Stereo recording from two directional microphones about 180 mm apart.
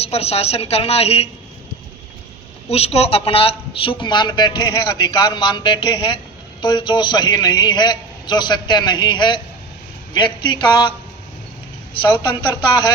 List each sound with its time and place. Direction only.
0.0 s a woman's voice: 35° left (ahead or behind)
2.6 s a man's voice: 35° left (ahead or behind)
12.3 s a man's voice: 25° left (ahead or behind)